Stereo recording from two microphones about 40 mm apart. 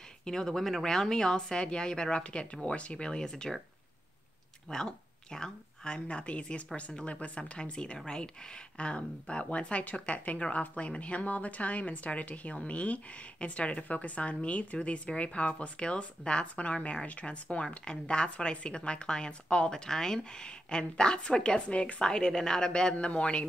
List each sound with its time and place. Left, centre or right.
0.2 s a woman's voice: centre
4.6 s a woman's voice: centre; by 22.0 s left
22.0 s a woman's voice: centre